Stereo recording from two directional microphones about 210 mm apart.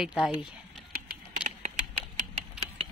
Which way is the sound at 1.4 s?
5° right (ahead or behind).